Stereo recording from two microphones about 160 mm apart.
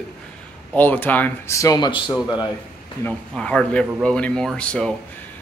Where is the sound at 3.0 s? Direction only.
5° left (ahead or behind).